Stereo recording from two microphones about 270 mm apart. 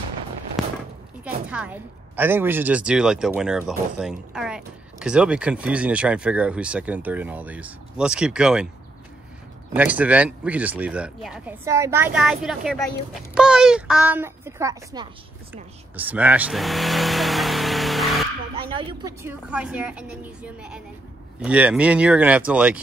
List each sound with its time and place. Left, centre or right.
1.2 s a woman's voice: centre
9.8 s a woman's voice: centre
16.0 s vehicle: centre
18.6 s a sound: centre
19.2 s a woman's voice: centre